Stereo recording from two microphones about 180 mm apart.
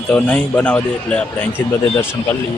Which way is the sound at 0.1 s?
5° left (ahead or behind).